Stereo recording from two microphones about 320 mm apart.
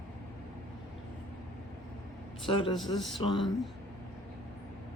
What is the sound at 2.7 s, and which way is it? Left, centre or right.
Speech, centre.